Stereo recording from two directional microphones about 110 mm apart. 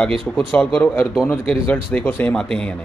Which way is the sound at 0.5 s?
10° left (ahead or behind).